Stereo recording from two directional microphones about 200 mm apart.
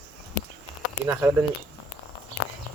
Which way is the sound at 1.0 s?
10° right (ahead or behind).